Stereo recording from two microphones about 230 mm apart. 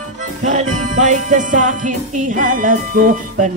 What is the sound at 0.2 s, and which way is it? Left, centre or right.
Music, right.